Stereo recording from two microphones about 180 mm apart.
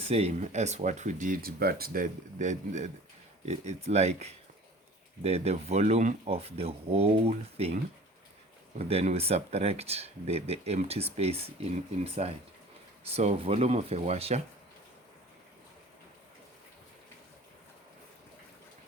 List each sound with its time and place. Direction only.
0.0 s speech: 35° right (ahead or behind)
8.8 s speech: 35° right (ahead or behind)